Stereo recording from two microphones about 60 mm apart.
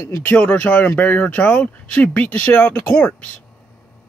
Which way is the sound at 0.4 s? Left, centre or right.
Left.